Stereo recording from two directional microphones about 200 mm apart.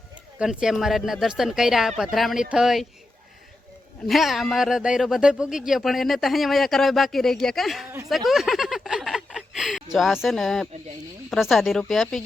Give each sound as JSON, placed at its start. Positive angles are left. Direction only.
{"t": 0.3, "sound": "speech", "side_deg": -5}
{"t": 4.0, "sound": "speech", "side_deg": 0}
{"t": 8.1, "sound": "a sound", "side_deg": 0}
{"t": 11.3, "sound": "speech", "side_deg": 0}